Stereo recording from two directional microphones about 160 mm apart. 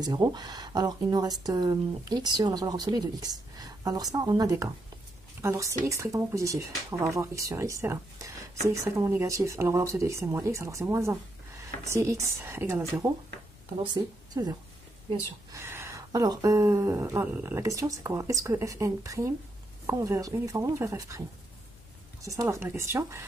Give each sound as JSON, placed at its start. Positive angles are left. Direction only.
{"t": 0.0, "sound": "speech", "side_deg": -25}
{"t": 13.9, "sound": "a woman's voice", "side_deg": -25}
{"t": 22.2, "sound": "speech", "side_deg": -20}